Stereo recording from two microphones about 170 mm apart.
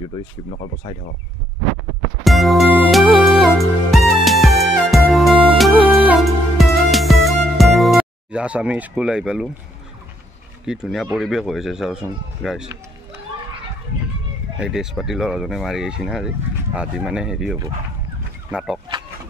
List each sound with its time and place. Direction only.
0.5 s speech: 40° left (ahead or behind)
2.2 s music: centre (ahead or behind)
10.6 s speech: 5° right (ahead or behind)
14.6 s speech: 5° right (ahead or behind)